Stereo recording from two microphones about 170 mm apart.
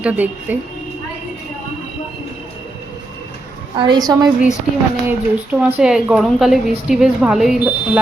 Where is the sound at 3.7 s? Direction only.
25° right (ahead or behind).